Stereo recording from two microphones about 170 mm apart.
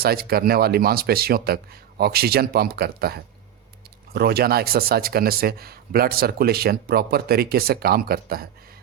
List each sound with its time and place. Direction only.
0.0 s speech: 65° right (ahead or behind)